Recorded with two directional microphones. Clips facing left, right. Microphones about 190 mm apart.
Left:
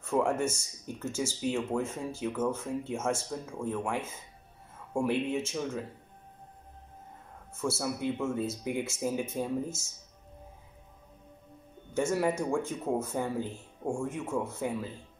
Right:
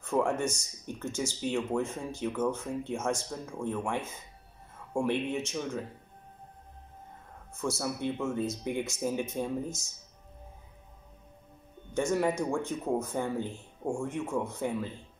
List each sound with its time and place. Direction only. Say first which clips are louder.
0.0 s speech: even; 5° left (ahead or behind)
7.5 s speech: left 1 dB; 5° left (ahead or behind)
11.9 s speech: even; 5° left (ahead or behind)